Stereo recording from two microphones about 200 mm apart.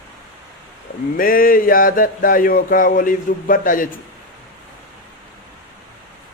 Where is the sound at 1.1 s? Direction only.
45° left (ahead or behind).